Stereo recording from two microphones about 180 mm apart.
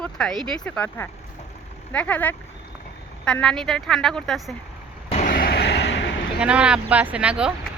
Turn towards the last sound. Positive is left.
turn(degrees=-5)  # may be behind; listen again after turning